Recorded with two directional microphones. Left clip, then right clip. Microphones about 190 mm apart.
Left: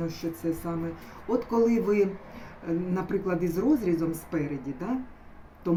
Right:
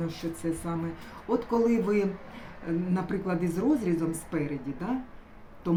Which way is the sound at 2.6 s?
5° right (ahead or behind).